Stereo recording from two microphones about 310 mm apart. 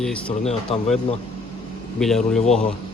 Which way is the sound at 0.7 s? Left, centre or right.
Centre.